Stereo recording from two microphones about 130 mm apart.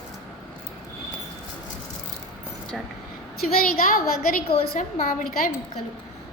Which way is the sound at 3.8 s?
90° left.